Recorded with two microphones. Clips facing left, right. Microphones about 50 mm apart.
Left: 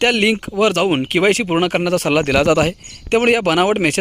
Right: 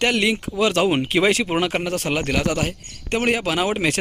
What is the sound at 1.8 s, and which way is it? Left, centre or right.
Speech, left.